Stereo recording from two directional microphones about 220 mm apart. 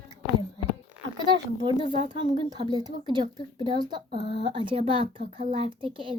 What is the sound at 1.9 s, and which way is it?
A child's voice, 25° right (ahead or behind).